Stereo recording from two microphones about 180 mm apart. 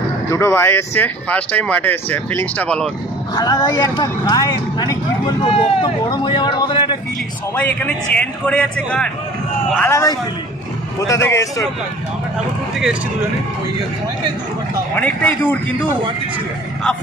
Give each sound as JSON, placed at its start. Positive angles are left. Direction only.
{"t": 0.3, "sound": "speech", "side_deg": 15}
{"t": 3.3, "sound": "speech", "side_deg": 20}
{"t": 7.5, "sound": "speech", "side_deg": 10}
{"t": 15.0, "sound": "speech", "side_deg": 10}